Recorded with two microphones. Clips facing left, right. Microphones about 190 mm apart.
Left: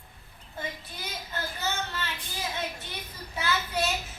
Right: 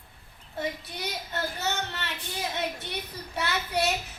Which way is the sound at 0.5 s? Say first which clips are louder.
Right 5 dB; 70° right (ahead or behind).